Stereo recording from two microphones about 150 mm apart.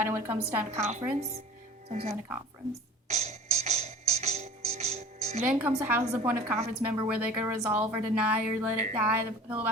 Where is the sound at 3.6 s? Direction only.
50° right (ahead or behind).